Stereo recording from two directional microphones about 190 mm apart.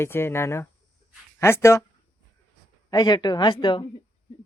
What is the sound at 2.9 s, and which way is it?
Speech, 20° left (ahead or behind).